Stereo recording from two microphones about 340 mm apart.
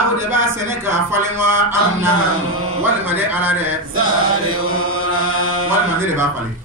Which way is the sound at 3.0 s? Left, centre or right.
Centre.